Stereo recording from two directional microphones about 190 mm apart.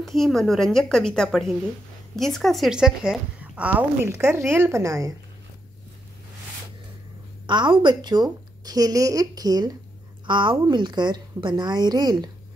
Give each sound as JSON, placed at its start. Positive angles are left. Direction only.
{"t": 0.0, "sound": "a woman's voice", "side_deg": 0}
{"t": 7.4, "sound": "a woman's voice", "side_deg": -25}